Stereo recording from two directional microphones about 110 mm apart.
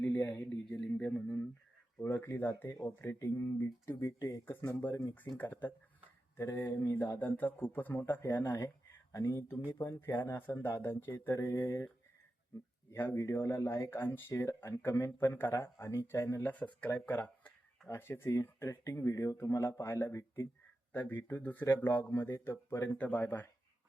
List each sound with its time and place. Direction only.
0.0 s a sound: 15° left (ahead or behind)
0.7 s speech: 10° left (ahead or behind)
2.0 s speech: 25° left (ahead or behind)
9.1 s speech: 30° left (ahead or behind)
9.6 s speech: 20° left (ahead or behind)
12.9 s speech: 20° left (ahead or behind)